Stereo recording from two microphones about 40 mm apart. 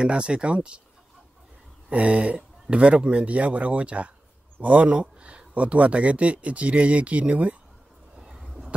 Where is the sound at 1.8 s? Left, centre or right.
Right.